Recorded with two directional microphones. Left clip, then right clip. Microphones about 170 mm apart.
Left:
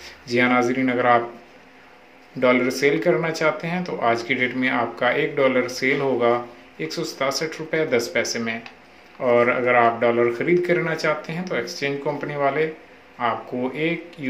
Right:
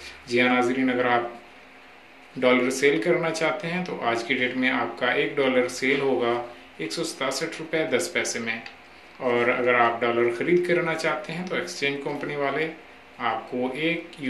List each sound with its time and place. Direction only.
0.3 s speech: 30° left (ahead or behind)
2.4 s speech: 25° left (ahead or behind)